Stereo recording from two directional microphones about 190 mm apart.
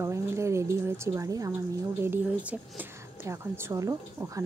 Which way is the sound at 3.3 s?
15° right (ahead or behind).